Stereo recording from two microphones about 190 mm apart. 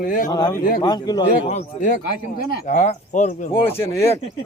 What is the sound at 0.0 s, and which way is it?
Speech, 45° left (ahead or behind).